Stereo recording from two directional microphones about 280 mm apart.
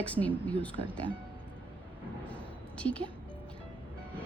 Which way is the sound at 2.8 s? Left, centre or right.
Centre.